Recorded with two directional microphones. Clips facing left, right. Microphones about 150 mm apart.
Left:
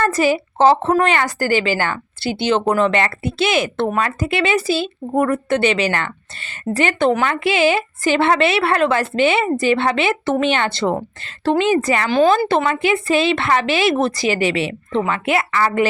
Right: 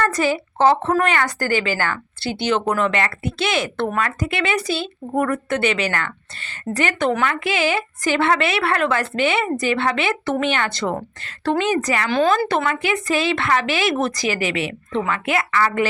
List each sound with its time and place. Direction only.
0.2 s a woman's voice: 20° left (ahead or behind)